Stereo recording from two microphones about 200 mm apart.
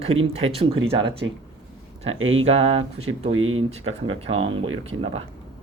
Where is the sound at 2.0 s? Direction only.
85° right.